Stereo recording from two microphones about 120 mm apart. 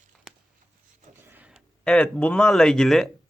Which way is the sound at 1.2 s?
15° right (ahead or behind).